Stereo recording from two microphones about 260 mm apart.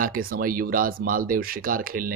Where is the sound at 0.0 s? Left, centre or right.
Right.